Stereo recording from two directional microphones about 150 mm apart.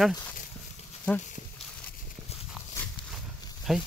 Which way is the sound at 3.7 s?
Centre (ahead or behind).